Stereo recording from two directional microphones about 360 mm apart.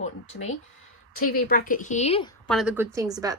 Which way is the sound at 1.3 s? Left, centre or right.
Left.